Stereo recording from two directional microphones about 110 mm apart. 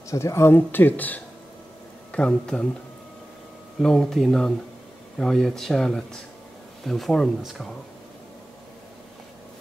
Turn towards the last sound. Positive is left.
turn(degrees=0)  # may be behind; listen again after turning